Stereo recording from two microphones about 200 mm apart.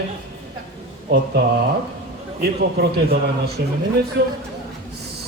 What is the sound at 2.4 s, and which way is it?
A man's voice, 50° right (ahead or behind).